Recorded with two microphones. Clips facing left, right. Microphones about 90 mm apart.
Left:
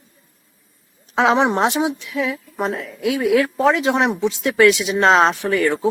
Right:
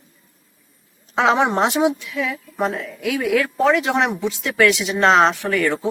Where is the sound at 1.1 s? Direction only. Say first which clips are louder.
Left 1 dB; 20° left (ahead or behind).